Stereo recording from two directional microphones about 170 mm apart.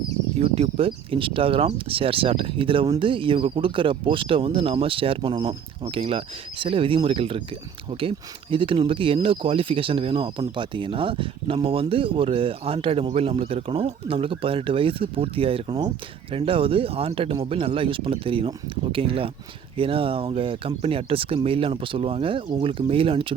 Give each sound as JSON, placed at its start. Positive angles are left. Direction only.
{"t": 0.3, "sound": "speech", "side_deg": -35}